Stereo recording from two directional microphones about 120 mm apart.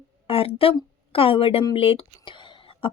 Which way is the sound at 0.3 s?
50° left (ahead or behind).